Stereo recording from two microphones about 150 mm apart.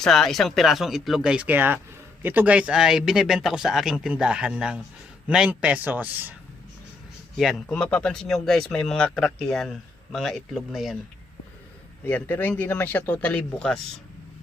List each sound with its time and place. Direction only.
0.0 s speech: centre (ahead or behind)
7.3 s speech: 5° left (ahead or behind)
12.0 s speech: 10° left (ahead or behind)